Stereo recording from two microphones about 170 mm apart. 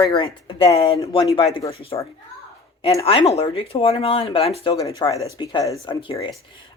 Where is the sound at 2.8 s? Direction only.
35° left (ahead or behind).